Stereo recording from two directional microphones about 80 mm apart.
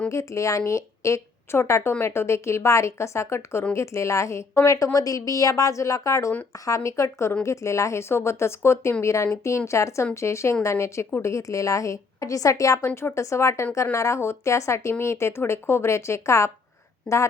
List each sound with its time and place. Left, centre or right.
0.1 s a woman's voice: left
12.8 s speech: left
17.1 s a woman's voice: centre